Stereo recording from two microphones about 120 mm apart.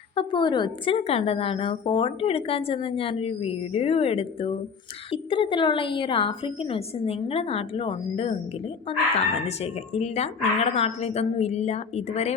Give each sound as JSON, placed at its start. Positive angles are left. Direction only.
{"t": 0.2, "sound": "a woman's voice", "side_deg": 40}